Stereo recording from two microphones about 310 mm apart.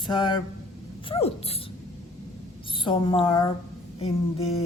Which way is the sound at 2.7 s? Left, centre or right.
Centre.